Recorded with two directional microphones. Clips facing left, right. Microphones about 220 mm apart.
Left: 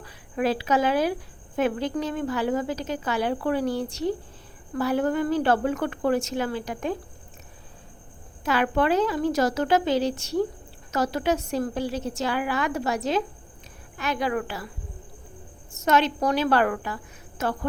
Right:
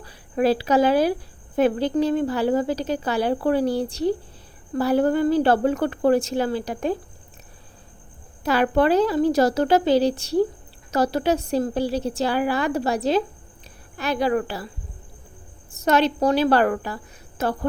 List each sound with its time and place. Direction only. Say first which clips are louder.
0.0 s a woman's voice: right 5 dB; 35° right (ahead or behind)
8.4 s a woman's voice: right 4 dB; 35° right (ahead or behind)
15.7 s a woman's voice: right 3 dB; 35° right (ahead or behind)